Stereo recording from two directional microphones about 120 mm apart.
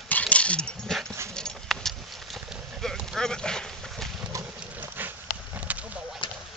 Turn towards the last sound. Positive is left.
turn(degrees=-15)  # may be behind; listen again after turning